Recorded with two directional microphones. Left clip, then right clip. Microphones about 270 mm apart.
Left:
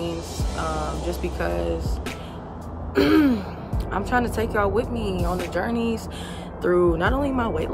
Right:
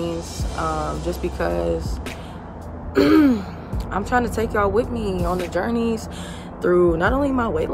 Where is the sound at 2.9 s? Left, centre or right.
Centre.